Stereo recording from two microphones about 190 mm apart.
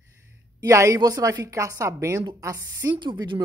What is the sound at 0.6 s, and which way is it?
Speech, 15° right (ahead or behind).